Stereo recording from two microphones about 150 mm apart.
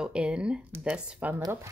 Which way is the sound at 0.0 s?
5° right (ahead or behind).